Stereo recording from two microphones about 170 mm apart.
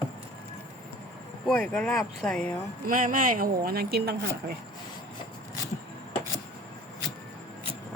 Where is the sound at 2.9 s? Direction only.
55° right (ahead or behind); by 4.6 s 70° right (ahead or behind).